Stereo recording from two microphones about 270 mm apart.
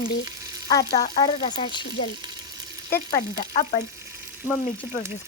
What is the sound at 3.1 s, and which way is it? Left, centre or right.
Speech, left.